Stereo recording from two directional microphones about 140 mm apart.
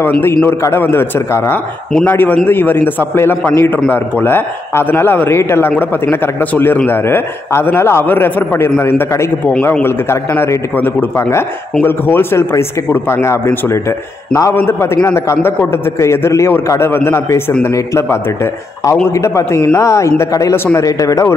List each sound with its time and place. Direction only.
0.2 s a man's voice: 15° left (ahead or behind)